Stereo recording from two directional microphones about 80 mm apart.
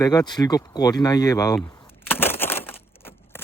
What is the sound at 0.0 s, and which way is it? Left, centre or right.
Speech, left.